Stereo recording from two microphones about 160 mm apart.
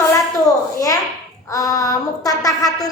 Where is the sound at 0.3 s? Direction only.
20° left (ahead or behind).